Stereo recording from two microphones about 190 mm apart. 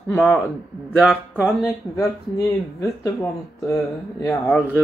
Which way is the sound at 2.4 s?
20° left (ahead or behind).